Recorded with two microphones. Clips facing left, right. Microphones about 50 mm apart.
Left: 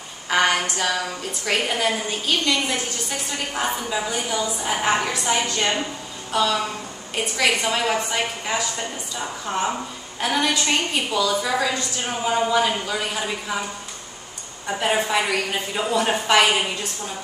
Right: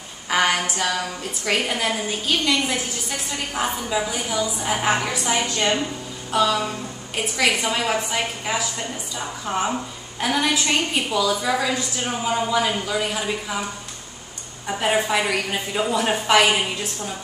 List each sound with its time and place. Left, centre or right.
0.3 s a woman's voice: centre
14.7 s a woman's voice: centre